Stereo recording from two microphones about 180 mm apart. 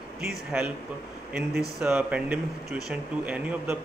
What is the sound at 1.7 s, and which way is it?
A man's voice, 10° right (ahead or behind).